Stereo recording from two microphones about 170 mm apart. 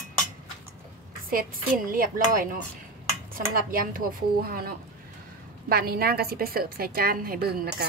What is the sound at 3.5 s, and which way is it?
A woman's voice, 55° right (ahead or behind).